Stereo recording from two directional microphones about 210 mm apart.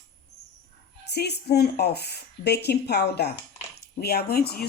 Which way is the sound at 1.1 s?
50° left (ahead or behind).